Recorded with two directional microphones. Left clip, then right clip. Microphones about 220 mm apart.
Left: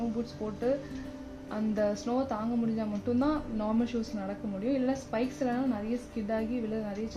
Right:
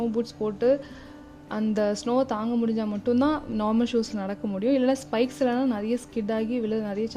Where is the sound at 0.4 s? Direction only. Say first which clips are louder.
Right 8 dB; 50° right (ahead or behind).